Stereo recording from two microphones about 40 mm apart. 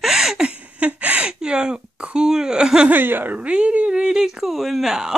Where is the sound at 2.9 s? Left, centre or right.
Right.